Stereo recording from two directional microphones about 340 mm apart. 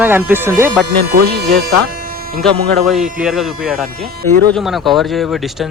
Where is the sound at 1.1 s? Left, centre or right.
Right.